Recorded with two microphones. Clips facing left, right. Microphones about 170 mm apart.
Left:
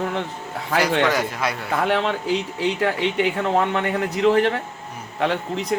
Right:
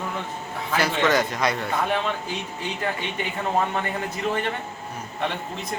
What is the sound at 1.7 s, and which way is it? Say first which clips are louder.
Speech: left 4 dB; 75° left (ahead or behind).